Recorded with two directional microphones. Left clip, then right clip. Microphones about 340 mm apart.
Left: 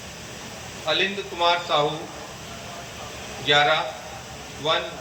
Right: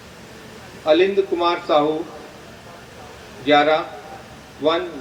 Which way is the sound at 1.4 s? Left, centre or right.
Right.